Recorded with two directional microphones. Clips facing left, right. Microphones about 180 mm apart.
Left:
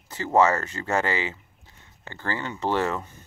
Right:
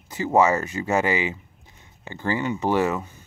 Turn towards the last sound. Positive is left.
turn(degrees=-10)  # may be behind; listen again after turning